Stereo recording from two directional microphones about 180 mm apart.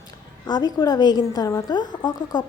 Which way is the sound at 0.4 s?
20° left (ahead or behind).